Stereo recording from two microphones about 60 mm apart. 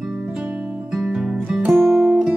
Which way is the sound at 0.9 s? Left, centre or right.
Centre.